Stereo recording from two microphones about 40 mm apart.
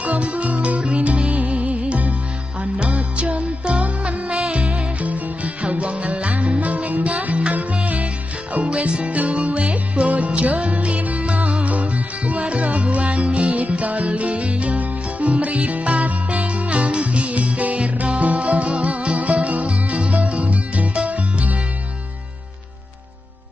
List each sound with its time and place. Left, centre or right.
0.0 s music: right